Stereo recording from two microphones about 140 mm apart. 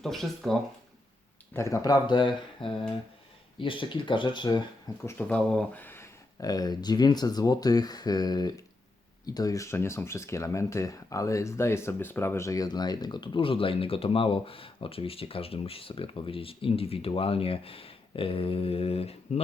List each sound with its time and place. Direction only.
0.0 s speech: centre (ahead or behind)
1.5 s speech: 20° left (ahead or behind)
5.0 s speech: 10° left (ahead or behind)
6.4 s speech: 30° left (ahead or behind); by 19.4 s 45° left (ahead or behind)